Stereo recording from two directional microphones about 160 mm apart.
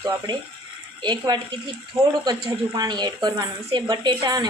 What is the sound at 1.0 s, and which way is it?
Speech, 25° right (ahead or behind).